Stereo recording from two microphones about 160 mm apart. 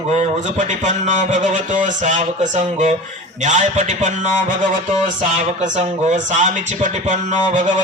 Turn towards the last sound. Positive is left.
turn(degrees=-50)  # may be behind; listen again after turning